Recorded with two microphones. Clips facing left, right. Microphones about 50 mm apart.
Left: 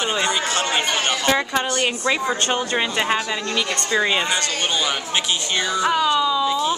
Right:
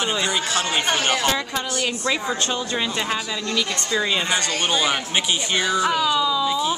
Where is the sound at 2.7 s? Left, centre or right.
Left.